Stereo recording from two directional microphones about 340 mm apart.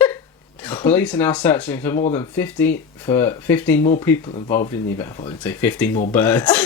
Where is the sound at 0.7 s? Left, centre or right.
Centre.